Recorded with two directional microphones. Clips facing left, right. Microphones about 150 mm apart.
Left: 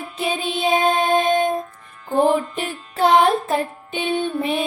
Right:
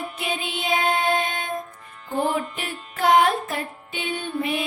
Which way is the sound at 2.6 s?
35° left (ahead or behind).